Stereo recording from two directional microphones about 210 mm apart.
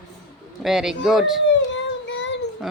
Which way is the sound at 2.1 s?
60° left (ahead or behind).